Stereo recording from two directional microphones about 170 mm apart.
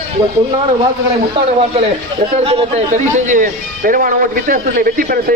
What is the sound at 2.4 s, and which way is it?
A man's voice, 35° right (ahead or behind).